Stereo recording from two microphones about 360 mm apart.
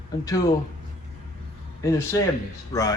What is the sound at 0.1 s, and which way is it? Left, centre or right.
Speech, centre.